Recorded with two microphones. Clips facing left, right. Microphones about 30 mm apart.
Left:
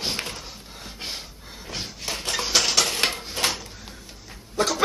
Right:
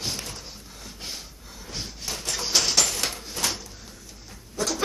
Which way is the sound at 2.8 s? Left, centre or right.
Left.